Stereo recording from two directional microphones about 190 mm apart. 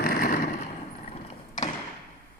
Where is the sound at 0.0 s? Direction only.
50° left (ahead or behind).